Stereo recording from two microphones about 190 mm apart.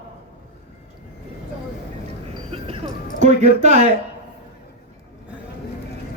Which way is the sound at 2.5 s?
30° right (ahead or behind).